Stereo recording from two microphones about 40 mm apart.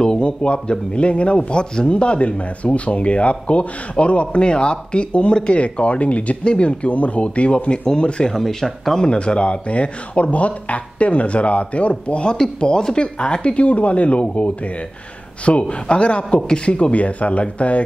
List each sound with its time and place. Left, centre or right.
0.0 s speech: left
8.3 s speech: centre
8.9 s speech: left